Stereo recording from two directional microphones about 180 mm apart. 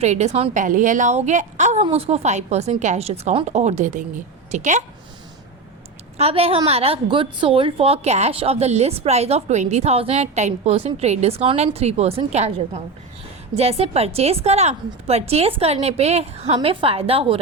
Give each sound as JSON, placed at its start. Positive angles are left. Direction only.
{"t": 0.0, "sound": "a woman's voice", "side_deg": -40}
{"t": 6.1, "sound": "a woman's voice", "side_deg": -35}